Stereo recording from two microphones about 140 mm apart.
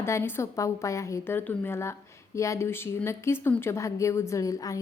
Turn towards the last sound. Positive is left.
turn(degrees=25)  # may be behind; listen again after turning